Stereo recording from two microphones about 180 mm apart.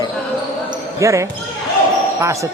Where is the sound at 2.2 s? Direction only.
15° right (ahead or behind).